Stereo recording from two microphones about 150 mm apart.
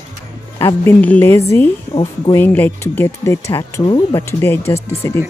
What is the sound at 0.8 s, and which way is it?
Speech, 10° left (ahead or behind).